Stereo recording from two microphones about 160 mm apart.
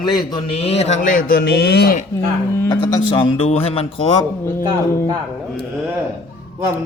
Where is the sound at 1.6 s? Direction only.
85° left.